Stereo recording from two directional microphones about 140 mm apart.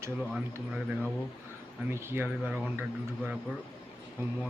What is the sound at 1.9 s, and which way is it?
Speech, 15° right (ahead or behind).